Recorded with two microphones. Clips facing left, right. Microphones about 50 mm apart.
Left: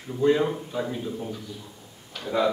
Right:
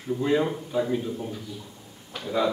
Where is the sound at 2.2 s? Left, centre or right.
Centre.